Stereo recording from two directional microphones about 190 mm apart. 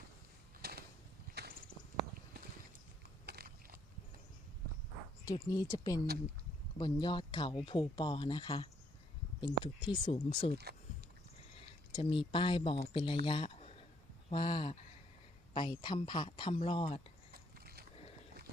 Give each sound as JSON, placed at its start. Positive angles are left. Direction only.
{"t": 0.6, "sound": "a sound", "side_deg": -55}
{"t": 3.2, "sound": "biting", "side_deg": -55}
{"t": 5.2, "sound": "speech", "side_deg": 20}
{"t": 11.9, "sound": "speech", "side_deg": 25}
{"t": 13.2, "sound": "a sound", "side_deg": 30}
{"t": 14.3, "sound": "speech", "side_deg": 25}